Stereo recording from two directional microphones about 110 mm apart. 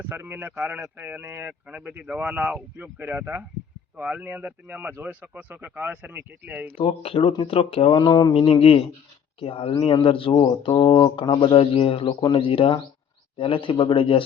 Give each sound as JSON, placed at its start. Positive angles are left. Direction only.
{"t": 0.0, "sound": "a man's voice", "side_deg": -20}
{"t": 6.7, "sound": "speech", "side_deg": 60}
{"t": 8.3, "sound": "speech", "side_deg": 60}